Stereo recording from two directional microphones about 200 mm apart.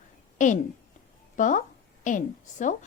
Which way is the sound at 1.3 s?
40° left (ahead or behind).